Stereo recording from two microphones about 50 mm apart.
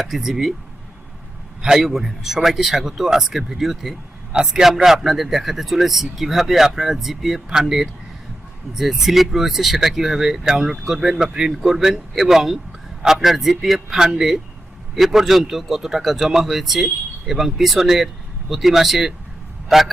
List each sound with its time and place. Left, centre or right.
0.0 s a man's voice: centre
1.6 s a man's voice: centre